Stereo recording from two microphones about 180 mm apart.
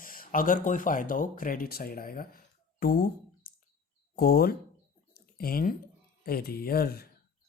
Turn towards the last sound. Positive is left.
turn(degrees=60)  # may be behind; listen again after turning